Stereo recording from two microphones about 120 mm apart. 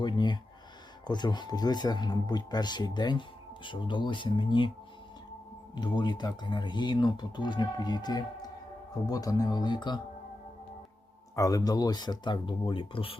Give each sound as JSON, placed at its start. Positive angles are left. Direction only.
{"t": 0.0, "sound": "a sound", "side_deg": 40}
{"t": 1.0, "sound": "speech", "side_deg": 35}
{"t": 5.7, "sound": "speech", "side_deg": 35}
{"t": 11.3, "sound": "speech", "side_deg": 30}